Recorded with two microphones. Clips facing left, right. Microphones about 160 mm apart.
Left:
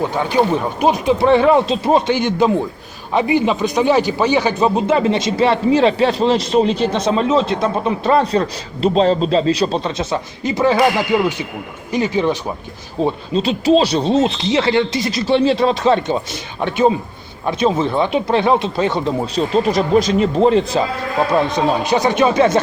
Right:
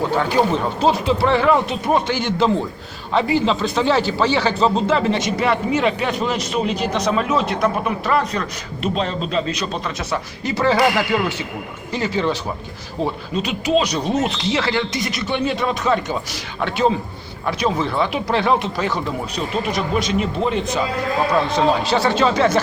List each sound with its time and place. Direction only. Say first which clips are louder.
0.2 s speech: left 3 dB; 15° left (ahead or behind); by 20.8 s 35° left (ahead or behind)
21.3 s speech: left 1 dB; 15° left (ahead or behind)